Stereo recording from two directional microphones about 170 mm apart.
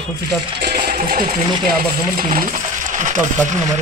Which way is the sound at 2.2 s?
55° right (ahead or behind).